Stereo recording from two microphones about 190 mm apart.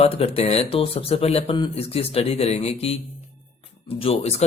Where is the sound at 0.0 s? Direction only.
35° left (ahead or behind).